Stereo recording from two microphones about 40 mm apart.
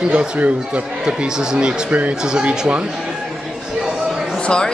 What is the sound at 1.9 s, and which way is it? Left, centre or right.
Speech, right.